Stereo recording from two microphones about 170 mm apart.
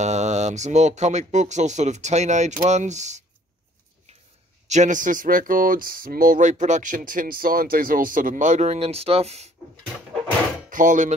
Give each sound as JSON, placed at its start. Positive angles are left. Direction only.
{"t": 0.0, "sound": "speech", "side_deg": -40}
{"t": 4.6, "sound": "speech", "side_deg": -45}
{"t": 10.7, "sound": "speech", "side_deg": -50}